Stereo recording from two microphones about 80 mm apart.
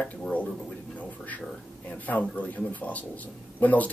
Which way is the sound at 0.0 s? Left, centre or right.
Centre.